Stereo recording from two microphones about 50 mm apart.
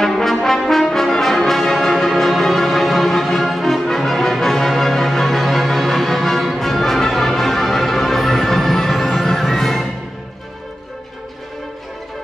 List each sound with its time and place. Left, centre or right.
0.0 s brass instrument: centre